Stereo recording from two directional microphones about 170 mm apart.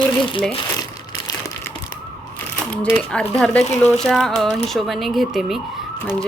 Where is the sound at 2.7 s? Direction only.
5° left (ahead or behind).